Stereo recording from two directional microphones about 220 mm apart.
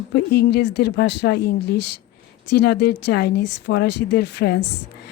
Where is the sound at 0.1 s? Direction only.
50° left (ahead or behind).